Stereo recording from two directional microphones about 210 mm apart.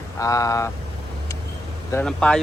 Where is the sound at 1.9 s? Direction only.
5° left (ahead or behind).